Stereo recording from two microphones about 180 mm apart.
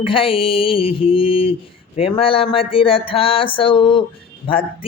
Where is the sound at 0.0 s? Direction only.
30° left (ahead or behind).